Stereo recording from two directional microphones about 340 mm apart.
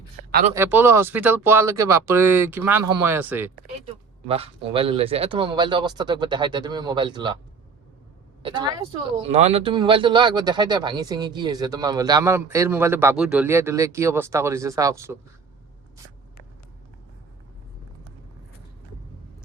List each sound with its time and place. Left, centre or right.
0.3 s speech: right
0.5 s speech: centre
4.3 s speech: centre
9.0 s speech: centre